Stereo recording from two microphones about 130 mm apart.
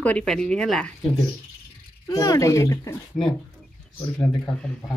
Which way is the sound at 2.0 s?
30° left (ahead or behind).